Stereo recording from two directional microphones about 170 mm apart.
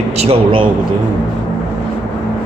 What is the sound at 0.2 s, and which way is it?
Speech, 30° right (ahead or behind).